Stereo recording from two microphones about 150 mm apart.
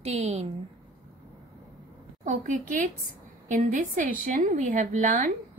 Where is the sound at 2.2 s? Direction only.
60° right (ahead or behind).